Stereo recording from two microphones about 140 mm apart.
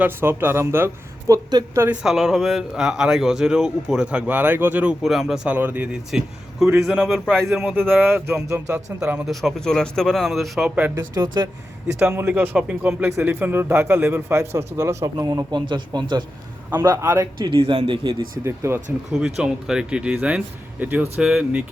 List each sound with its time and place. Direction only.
0.0 s a man's voice: 15° right (ahead or behind)
1.3 s a man's voice: 25° right (ahead or behind)
1.8 s speech: 10° right (ahead or behind)
7.8 s a man's voice: 15° right (ahead or behind)
11.1 s a man's voice: 30° right (ahead or behind)
12.1 s a man's voice: 15° right (ahead or behind)
13.1 s a man's voice: 20° right (ahead or behind)
16.6 s a man's voice: 15° right (ahead or behind)
17.5 s speech: 40° right (ahead or behind)
18.4 s a man's voice: 15° right (ahead or behind)
19.1 s a man's voice: 5° right (ahead or behind)